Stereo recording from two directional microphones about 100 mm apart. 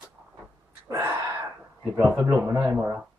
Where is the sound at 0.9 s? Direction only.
30° right (ahead or behind).